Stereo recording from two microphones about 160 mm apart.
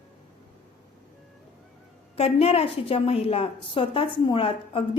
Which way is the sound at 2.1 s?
40° left (ahead or behind).